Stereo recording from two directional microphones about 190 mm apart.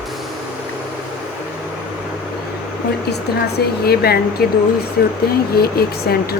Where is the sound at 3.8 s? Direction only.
55° left (ahead or behind).